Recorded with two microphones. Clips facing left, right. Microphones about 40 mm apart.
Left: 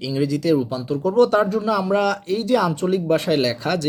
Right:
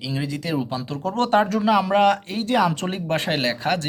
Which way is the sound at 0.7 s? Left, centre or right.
Right.